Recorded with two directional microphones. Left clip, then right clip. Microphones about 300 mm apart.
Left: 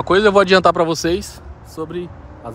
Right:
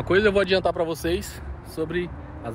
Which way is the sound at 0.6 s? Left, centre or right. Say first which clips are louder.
Left 9 dB; left.